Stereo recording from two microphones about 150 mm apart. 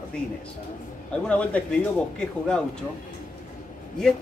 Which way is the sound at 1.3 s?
10° left (ahead or behind).